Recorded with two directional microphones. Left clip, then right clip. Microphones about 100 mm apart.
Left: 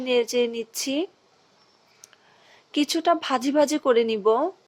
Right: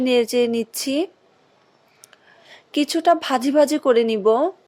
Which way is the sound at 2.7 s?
40° right (ahead or behind).